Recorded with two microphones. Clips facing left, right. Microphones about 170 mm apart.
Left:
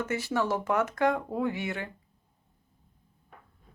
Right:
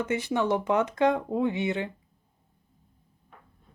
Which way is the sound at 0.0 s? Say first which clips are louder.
Right 2 dB; 20° right (ahead or behind).